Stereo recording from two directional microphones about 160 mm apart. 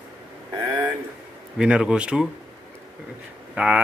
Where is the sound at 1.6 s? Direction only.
5° right (ahead or behind).